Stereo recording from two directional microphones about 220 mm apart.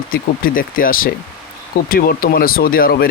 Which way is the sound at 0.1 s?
40° left (ahead or behind).